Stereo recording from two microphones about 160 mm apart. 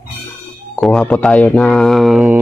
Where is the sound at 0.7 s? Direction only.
5° left (ahead or behind).